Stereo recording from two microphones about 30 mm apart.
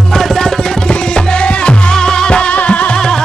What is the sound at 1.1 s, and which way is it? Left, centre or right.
Music, left.